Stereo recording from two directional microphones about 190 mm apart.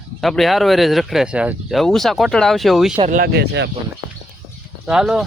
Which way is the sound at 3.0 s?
45° right (ahead or behind).